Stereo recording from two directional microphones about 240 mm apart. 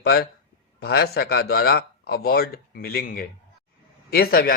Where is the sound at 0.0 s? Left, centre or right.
Left.